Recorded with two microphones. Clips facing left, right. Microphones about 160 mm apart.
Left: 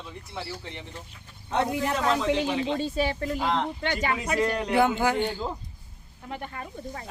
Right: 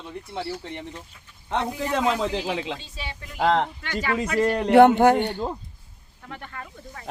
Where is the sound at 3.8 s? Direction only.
20° left (ahead or behind).